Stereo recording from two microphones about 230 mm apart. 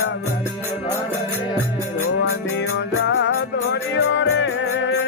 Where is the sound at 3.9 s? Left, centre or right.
Left.